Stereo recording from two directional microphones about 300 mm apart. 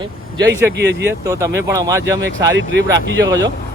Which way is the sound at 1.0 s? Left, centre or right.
Centre.